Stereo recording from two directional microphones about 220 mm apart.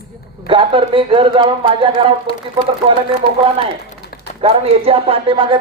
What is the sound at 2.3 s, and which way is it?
Speech, 25° left (ahead or behind).